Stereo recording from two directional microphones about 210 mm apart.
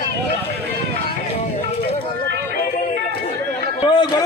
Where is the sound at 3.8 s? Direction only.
20° left (ahead or behind).